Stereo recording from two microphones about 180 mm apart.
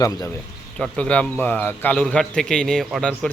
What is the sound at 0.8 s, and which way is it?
Speech, 5° left (ahead or behind).